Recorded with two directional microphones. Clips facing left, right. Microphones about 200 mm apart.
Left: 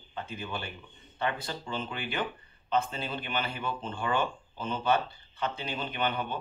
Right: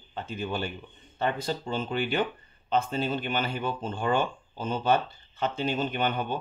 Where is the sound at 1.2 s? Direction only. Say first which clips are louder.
Right 4 dB; 45° right (ahead or behind).